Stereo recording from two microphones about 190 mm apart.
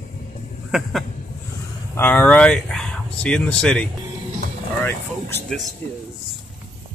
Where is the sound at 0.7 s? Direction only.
Centre (ahead or behind).